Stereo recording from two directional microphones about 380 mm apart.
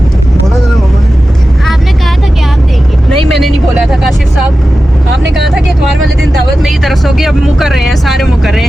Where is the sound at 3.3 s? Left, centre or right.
Centre.